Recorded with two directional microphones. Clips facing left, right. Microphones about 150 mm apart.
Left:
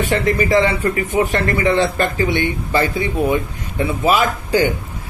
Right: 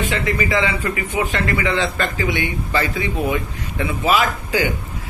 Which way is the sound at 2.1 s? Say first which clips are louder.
Left 4 dB; 35° left (ahead or behind).